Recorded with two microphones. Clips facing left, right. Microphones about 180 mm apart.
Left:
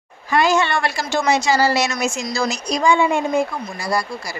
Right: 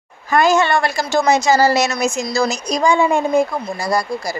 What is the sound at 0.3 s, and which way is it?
A woman's voice, 45° right (ahead or behind).